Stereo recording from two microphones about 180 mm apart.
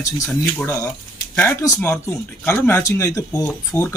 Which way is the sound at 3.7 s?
5° left (ahead or behind).